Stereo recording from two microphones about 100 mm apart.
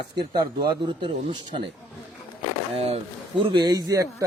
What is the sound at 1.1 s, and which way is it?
Speech, 70° right (ahead or behind).